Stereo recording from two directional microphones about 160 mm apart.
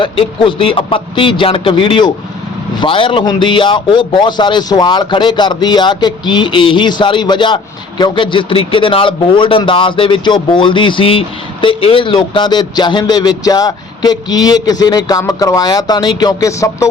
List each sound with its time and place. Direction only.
0.0 s a man's voice: 30° left (ahead or behind)